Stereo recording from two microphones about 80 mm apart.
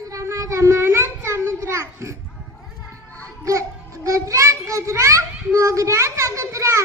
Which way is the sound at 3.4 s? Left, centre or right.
Right.